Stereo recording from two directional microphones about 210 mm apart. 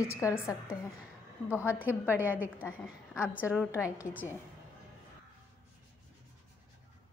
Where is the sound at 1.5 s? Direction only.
10° right (ahead or behind).